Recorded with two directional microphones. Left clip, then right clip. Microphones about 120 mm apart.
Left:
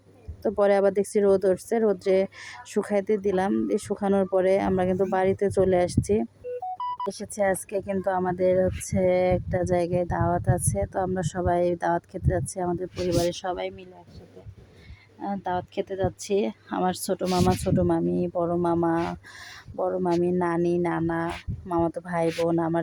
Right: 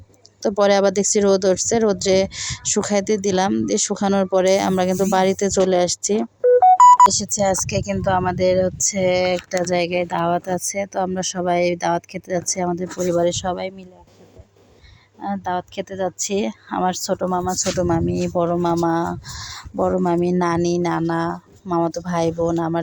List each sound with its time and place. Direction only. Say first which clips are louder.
0.6 s speech: right 5 dB; 30° right (ahead or behind)
15.2 s speech: right 5 dB; 30° right (ahead or behind)
17.2 s speech: right 1 dB; 5° right (ahead or behind)
17.8 s speech: right 4 dB; 30° right (ahead or behind)
19.7 s speech: right 6 dB; 35° right (ahead or behind)